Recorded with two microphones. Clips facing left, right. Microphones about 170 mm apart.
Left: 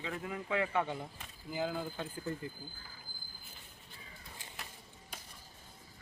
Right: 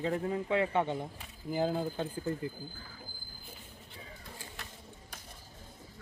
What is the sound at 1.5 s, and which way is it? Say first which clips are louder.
Speech: right 5 dB; 35° right (ahead or behind).